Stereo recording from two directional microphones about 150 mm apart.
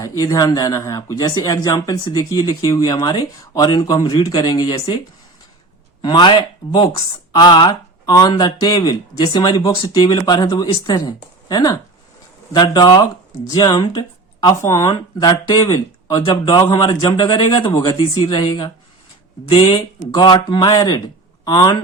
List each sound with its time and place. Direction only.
0.0 s speech: 20° left (ahead or behind)
6.0 s speech: 30° left (ahead or behind)